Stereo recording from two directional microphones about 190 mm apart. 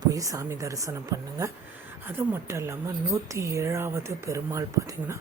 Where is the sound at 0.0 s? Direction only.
20° right (ahead or behind).